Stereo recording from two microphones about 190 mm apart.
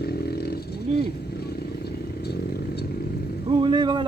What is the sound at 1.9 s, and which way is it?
Vehicle, 60° left (ahead or behind).